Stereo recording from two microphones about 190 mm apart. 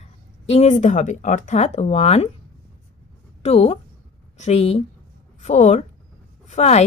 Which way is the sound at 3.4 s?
35° left (ahead or behind).